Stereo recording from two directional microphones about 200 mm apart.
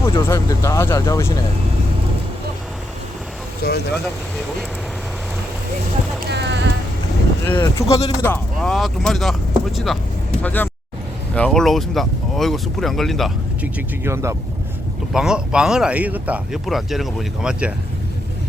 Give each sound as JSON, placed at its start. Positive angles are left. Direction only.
{"t": 0.0, "sound": "speech", "side_deg": 15}
{"t": 3.6, "sound": "speech", "side_deg": 50}
{"t": 6.2, "sound": "clip-clop", "side_deg": -55}
{"t": 7.4, "sound": "speech", "side_deg": 10}
{"t": 15.1, "sound": "speech", "side_deg": -5}